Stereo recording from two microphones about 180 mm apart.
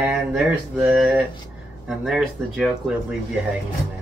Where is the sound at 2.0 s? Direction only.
Centre (ahead or behind).